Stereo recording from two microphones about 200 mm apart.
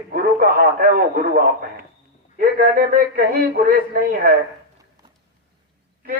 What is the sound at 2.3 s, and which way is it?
Speech, 45° right (ahead or behind).